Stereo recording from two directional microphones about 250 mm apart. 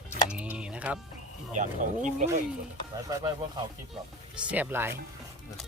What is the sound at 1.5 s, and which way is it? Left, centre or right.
Speech, right.